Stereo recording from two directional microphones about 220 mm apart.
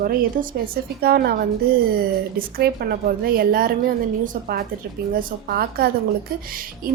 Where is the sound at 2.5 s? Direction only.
45° right (ahead or behind).